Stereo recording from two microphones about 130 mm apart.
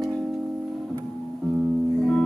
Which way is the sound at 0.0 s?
Centre (ahead or behind).